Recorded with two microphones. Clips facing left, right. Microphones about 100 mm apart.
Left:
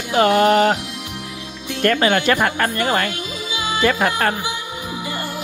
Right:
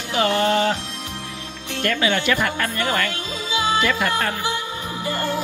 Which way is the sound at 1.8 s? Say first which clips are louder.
Left 5 dB; 50° left (ahead or behind).